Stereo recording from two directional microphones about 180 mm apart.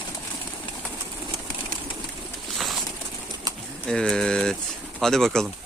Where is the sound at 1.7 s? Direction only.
50° right (ahead or behind).